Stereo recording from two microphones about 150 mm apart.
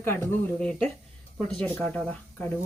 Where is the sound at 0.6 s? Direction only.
5° left (ahead or behind).